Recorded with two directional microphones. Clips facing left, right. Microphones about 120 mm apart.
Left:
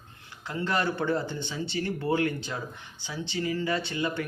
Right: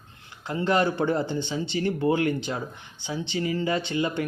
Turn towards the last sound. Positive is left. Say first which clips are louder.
# right 4 dB
turn(degrees=-25)  # may be behind; listen again after turning